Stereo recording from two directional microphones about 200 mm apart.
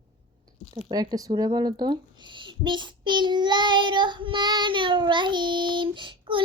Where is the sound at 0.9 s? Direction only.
20° right (ahead or behind).